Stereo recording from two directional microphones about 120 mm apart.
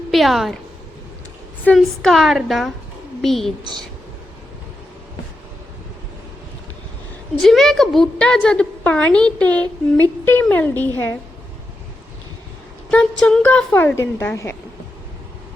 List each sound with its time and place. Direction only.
0.1 s a woman's voice: centre (ahead or behind)
1.7 s a woman's voice: 5° left (ahead or behind)
3.6 s speech: 40° right (ahead or behind)
7.3 s a woman's voice: centre (ahead or behind)
12.9 s a woman's voice: 10° left (ahead or behind)